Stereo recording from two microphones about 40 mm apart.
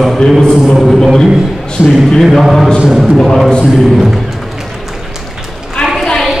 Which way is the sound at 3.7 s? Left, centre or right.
Centre.